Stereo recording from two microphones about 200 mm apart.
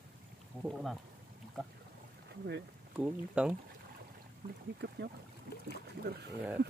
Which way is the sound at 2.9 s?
5° right (ahead or behind).